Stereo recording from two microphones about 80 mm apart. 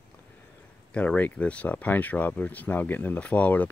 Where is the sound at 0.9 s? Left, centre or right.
Centre.